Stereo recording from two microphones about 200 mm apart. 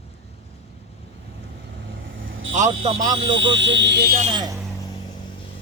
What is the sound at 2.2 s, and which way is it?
Vehicle, 80° right.